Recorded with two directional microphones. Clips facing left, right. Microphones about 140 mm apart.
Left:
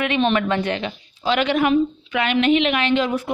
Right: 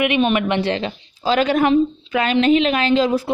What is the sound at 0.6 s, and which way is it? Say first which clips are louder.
A woman's voice: right 3 dB; 35° right (ahead or behind).